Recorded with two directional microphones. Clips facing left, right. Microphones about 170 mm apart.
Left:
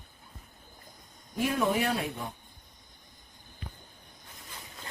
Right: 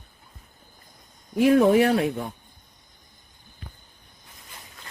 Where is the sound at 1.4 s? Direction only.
60° right (ahead or behind).